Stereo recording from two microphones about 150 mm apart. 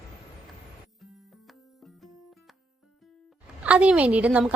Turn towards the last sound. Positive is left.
turn(degrees=-10)  # may be behind; listen again after turning